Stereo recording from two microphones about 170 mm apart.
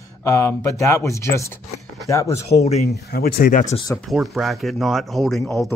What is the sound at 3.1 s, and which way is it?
Speech, 65° left (ahead or behind).